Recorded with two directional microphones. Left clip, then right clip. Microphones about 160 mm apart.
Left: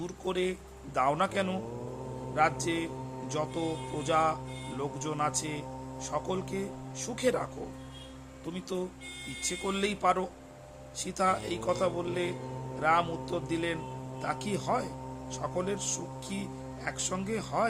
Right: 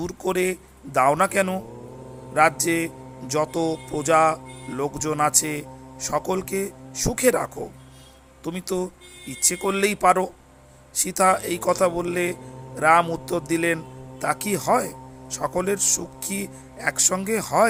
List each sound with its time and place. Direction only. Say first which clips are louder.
0.0 s speech: right 8 dB; 35° right (ahead or behind)
8.5 s speech: right 8 dB; 40° right (ahead or behind)